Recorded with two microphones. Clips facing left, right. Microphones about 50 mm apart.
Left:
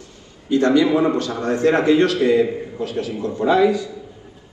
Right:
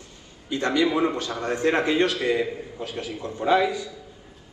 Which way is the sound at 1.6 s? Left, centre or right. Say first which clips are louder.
Left 6 dB; right.